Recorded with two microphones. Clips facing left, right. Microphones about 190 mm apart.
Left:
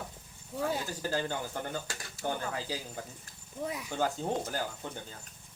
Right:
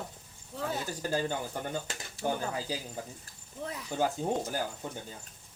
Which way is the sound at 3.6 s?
10° left (ahead or behind).